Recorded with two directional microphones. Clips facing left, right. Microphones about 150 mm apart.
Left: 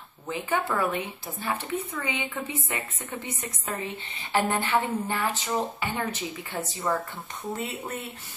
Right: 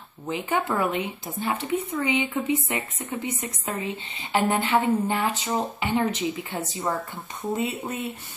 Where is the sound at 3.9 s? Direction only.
25° right (ahead or behind).